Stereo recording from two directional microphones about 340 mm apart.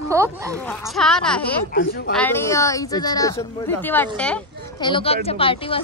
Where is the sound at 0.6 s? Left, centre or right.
Centre.